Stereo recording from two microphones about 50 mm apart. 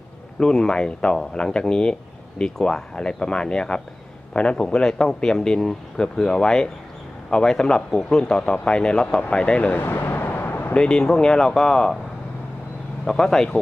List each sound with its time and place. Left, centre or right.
0.3 s speech: centre
9.7 s a sound: left
10.8 s speech: centre
13.1 s speech: centre